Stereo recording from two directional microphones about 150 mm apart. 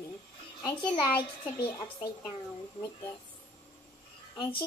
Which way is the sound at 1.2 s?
30° left (ahead or behind).